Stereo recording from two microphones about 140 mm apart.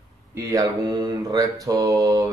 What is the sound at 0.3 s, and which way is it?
Mantra, 25° right (ahead or behind).